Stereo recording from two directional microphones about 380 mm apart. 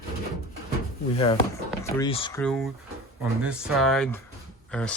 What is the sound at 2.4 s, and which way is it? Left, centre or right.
Speech, centre.